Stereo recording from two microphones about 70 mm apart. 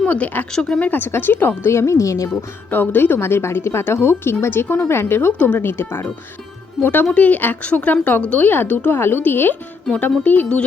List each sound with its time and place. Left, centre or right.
0.0 s speech: left
0.5 s speech: centre
0.8 s speech: left
2.6 s speech: left